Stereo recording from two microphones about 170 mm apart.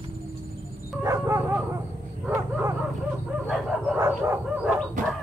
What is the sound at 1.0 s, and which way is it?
Dog, 15° right (ahead or behind).